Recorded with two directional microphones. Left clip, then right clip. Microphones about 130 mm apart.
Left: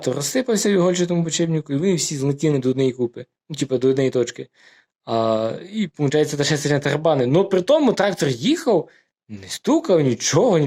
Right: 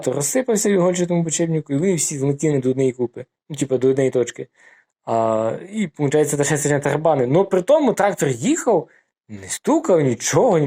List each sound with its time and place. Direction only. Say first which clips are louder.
0.2 s speech: right 1 dB; 35° left (ahead or behind)